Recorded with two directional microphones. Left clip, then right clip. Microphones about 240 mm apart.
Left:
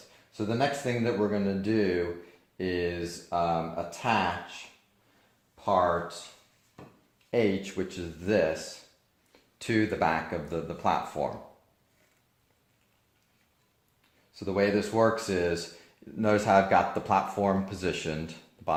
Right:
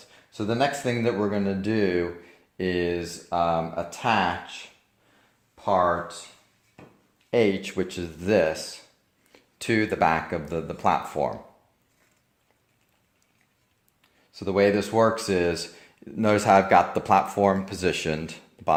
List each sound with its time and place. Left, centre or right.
0.3 s speech: right
5.6 s a sound: right
7.3 s speech: right
14.3 s speech: right